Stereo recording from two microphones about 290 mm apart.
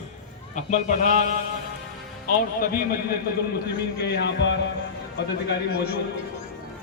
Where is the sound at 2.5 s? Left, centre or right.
Left.